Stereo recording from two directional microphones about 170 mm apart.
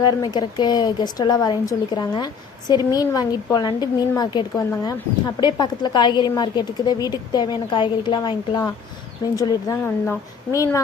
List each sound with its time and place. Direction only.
0.0 s a woman's voice: 25° left (ahead or behind)